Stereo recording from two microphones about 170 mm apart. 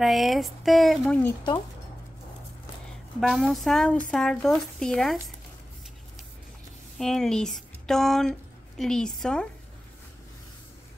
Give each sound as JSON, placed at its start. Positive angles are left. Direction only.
{"t": 0.0, "sound": "speech", "side_deg": 0}
{"t": 3.2, "sound": "speech", "side_deg": 0}
{"t": 7.0, "sound": "a woman's voice", "side_deg": 0}